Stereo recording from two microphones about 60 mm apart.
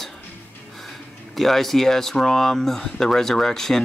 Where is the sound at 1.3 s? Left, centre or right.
Centre.